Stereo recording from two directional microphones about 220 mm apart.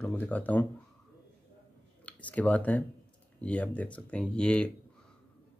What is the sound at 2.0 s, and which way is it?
Speech, 5° left (ahead or behind).